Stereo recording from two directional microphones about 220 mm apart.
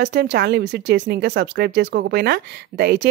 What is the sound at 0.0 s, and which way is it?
Speech, 50° right (ahead or behind).